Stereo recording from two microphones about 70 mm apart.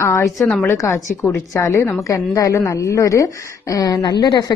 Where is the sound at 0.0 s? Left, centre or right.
Left.